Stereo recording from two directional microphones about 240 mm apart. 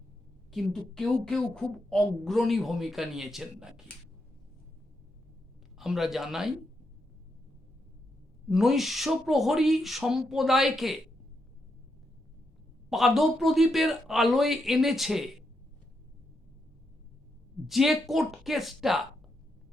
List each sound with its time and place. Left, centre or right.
0.5 s a woman's voice: centre
5.7 s speech: centre
8.4 s a woman's voice: centre
12.9 s a woman's voice: centre
17.7 s a woman's voice: centre